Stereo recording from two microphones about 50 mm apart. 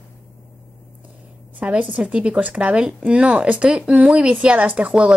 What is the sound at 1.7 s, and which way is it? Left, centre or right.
A woman's voice, right.